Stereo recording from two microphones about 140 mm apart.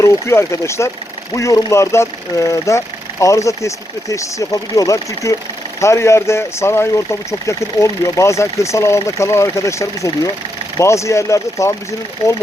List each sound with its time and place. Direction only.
0.0 s speech: 20° left (ahead or behind)